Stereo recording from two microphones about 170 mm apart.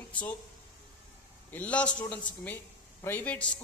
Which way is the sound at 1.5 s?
5° left (ahead or behind).